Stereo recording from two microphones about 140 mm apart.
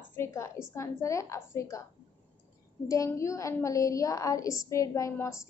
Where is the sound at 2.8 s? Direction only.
20° left (ahead or behind).